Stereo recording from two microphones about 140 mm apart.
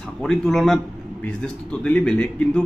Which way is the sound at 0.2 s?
Centre (ahead or behind).